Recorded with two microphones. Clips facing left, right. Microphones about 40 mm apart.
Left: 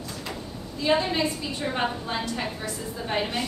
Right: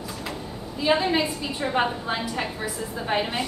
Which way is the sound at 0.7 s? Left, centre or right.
Centre.